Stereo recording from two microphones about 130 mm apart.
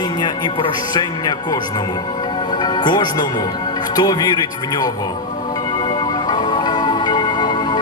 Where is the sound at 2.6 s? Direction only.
35° left (ahead or behind).